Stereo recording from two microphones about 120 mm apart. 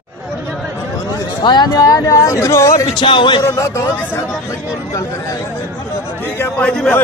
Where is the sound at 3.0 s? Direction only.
45° left (ahead or behind).